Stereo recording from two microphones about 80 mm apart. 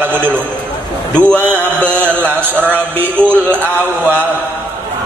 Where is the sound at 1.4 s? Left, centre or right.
Right.